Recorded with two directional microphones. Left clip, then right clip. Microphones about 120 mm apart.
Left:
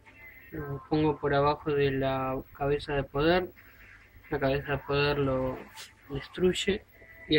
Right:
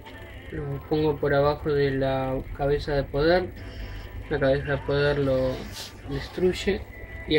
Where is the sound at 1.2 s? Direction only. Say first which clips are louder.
Right 4 dB; 25° left (ahead or behind).